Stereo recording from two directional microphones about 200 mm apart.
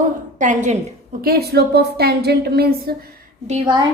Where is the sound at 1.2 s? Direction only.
50° right (ahead or behind).